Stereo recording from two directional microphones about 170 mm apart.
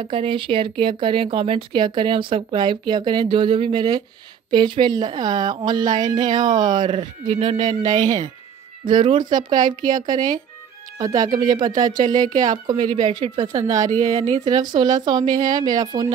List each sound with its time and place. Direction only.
0.0 s speech: 30° right (ahead or behind)
6.0 s speech: 45° right (ahead or behind)
6.3 s speech: 25° right (ahead or behind)
7.6 s speech: 45° right (ahead or behind)
8.8 s speech: 25° right (ahead or behind)